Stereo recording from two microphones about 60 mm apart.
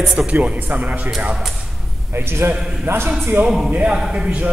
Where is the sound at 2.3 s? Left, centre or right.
Right.